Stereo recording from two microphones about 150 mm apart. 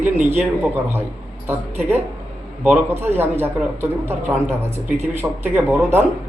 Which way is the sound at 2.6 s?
15° right (ahead or behind).